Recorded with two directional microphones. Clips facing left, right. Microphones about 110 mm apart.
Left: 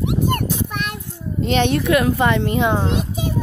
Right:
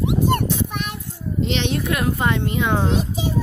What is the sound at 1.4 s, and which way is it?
Speech, 50° left (ahead or behind).